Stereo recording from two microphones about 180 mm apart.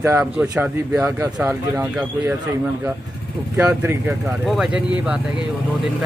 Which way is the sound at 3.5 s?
15° right (ahead or behind).